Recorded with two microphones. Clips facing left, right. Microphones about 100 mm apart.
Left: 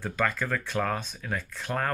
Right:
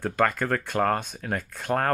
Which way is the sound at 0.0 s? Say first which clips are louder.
Right 5 dB; 50° right (ahead or behind).